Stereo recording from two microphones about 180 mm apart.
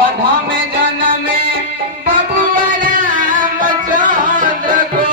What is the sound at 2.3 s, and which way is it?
Music, 50° right (ahead or behind).